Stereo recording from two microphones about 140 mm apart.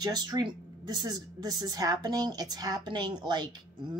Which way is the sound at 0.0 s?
30° right (ahead or behind).